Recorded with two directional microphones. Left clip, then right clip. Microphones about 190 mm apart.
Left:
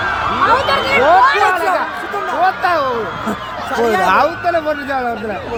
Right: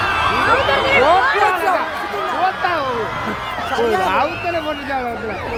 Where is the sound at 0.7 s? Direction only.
55° left (ahead or behind).